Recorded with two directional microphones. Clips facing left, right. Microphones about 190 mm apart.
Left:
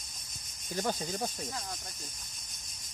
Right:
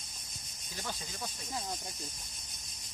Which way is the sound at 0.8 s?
45° left (ahead or behind).